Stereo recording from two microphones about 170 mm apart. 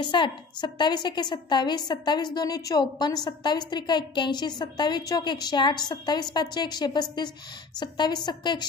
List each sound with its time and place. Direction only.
0.0 s a woman's voice: 25° left (ahead or behind)